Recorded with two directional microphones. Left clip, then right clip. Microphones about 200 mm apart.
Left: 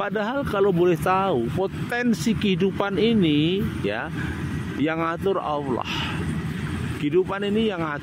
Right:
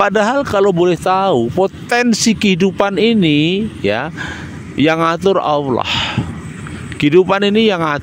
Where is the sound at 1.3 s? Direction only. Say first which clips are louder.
Right 10 dB; 35° right (ahead or behind).